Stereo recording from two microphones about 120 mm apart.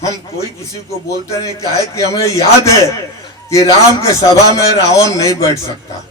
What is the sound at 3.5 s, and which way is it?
A man's voice, 25° left (ahead or behind).